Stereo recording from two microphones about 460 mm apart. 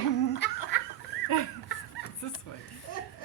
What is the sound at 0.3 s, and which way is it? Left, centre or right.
Laughter, left.